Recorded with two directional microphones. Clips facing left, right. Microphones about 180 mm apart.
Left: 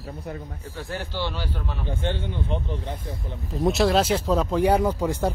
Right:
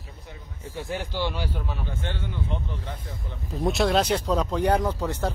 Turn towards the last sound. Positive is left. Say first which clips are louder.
# left 3 dB
turn(degrees=10)  # may be behind; listen again after turning